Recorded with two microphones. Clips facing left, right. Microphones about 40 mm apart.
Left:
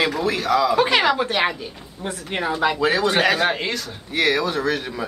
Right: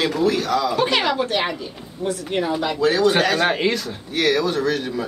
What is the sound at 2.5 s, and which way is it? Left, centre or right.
A woman's voice, centre.